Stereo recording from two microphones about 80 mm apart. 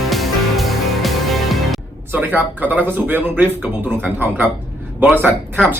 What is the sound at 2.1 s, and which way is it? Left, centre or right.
Speech, right.